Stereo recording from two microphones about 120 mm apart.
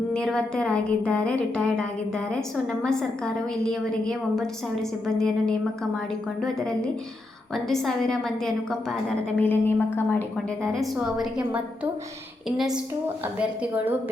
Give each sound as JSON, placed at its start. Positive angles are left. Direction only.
{"t": 0.1, "sound": "a woman's voice", "side_deg": 5}
{"t": 2.8, "sound": "a woman's voice", "side_deg": 5}
{"t": 9.4, "sound": "a woman's voice", "side_deg": 15}
{"t": 10.3, "sound": "a woman's voice", "side_deg": 5}